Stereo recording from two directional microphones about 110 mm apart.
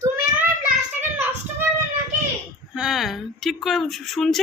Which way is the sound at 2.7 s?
5° right (ahead or behind).